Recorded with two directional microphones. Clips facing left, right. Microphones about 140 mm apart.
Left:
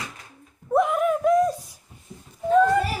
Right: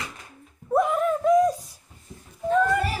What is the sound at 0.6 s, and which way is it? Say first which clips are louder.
Speech: left 1 dB; centre (ahead or behind).